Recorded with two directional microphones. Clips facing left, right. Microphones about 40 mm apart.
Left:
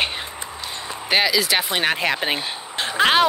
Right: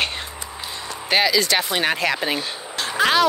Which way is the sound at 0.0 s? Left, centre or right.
Centre.